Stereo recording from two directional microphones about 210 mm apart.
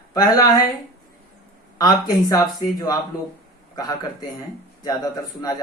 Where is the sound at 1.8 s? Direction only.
20° left (ahead or behind).